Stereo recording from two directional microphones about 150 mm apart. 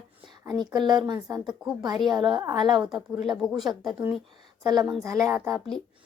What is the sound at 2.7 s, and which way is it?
Speech, 5° right (ahead or behind).